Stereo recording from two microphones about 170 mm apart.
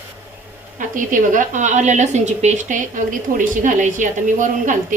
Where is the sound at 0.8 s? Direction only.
50° right (ahead or behind).